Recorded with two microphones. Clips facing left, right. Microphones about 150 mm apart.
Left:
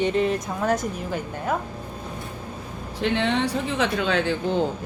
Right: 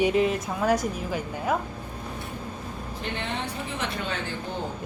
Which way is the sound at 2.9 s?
90° left.